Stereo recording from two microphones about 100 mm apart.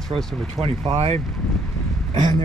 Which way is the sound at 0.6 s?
80° right.